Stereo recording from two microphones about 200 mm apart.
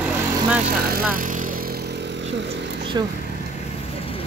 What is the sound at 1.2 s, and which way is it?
Vehicle, 40° right (ahead or behind).